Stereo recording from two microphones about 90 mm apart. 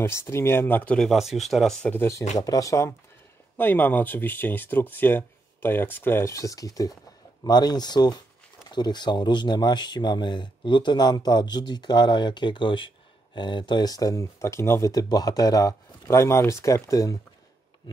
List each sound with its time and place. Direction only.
0.0 s speech: 30° left (ahead or behind)
1.1 s speech: centre (ahead or behind)
1.8 s speech: 20° left (ahead or behind)
2.0 s speech: 40° left (ahead or behind)
3.5 s speech: 20° left (ahead or behind)
6.3 s speech: 40° left (ahead or behind)